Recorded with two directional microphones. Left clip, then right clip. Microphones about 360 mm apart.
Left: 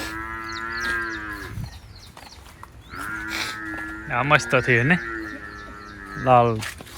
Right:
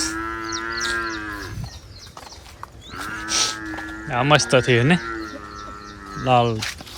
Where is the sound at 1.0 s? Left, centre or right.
Right.